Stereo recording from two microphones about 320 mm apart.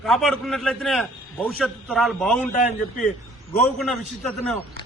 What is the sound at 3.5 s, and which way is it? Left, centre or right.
A man's voice, centre.